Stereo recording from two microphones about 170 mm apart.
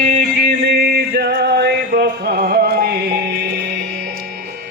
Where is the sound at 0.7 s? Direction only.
70° right (ahead or behind).